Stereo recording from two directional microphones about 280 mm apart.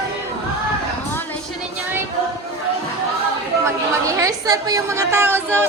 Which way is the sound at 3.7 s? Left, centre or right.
Centre.